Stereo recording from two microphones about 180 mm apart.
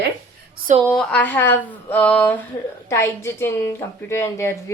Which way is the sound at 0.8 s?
Centre (ahead or behind).